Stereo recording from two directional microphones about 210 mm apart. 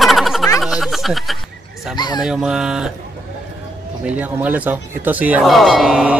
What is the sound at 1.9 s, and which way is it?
Speech, 20° left (ahead or behind).